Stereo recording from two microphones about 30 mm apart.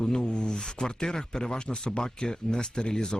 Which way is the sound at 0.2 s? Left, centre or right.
Left.